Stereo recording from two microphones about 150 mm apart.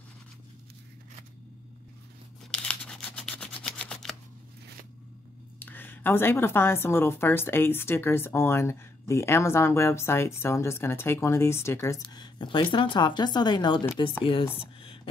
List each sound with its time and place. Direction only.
2.5 s rub: 5° left (ahead or behind)
5.6 s a woman's voice: 15° left (ahead or behind); by 14.5 s 40° left (ahead or behind)
14.6 s a sound: 35° left (ahead or behind)